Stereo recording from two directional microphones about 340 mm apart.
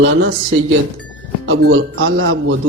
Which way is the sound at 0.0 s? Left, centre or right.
Right.